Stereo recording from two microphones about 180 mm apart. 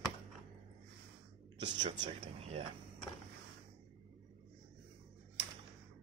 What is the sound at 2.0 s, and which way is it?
Speech, 35° right (ahead or behind).